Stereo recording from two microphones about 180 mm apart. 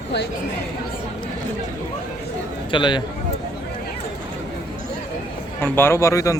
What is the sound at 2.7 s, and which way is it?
Speech, 25° left (ahead or behind).